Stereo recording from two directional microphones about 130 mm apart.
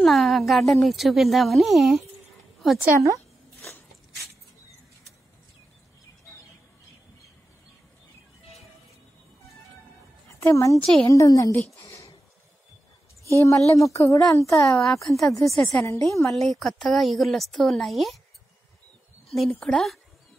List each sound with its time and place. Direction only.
0.0 s a woman's voice: centre (ahead or behind)
2.8 s a woman's voice: 25° right (ahead or behind)
10.4 s speech: 25° left (ahead or behind)
11.8 s a sound: 25° left (ahead or behind)
13.4 s speech: 25° left (ahead or behind)
14.8 s a woman's voice: centre (ahead or behind)
15.8 s speech: 25° left (ahead or behind)
16.3 s a woman's voice: centre (ahead or behind)
19.2 s a woman's voice: centre (ahead or behind)